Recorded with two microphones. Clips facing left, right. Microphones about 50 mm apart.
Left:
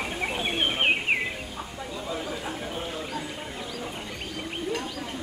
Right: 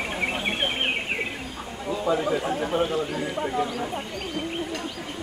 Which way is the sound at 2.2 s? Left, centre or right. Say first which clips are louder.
Right 8 dB; right.